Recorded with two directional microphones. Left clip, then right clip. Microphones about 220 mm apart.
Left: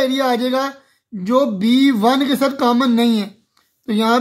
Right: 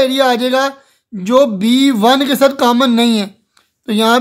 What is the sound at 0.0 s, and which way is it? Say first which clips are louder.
Speech: right 5 dB; 25° right (ahead or behind).